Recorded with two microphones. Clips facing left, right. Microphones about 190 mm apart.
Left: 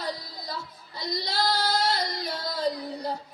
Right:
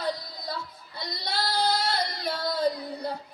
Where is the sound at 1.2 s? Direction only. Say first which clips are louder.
Right 1 dB; 60° right (ahead or behind).